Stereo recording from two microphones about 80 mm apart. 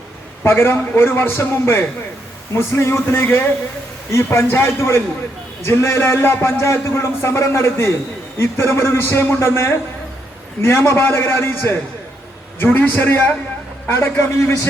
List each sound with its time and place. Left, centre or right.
0.4 s a man's voice: left